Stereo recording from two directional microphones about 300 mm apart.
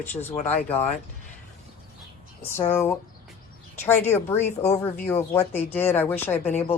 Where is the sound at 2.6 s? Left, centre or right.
Centre.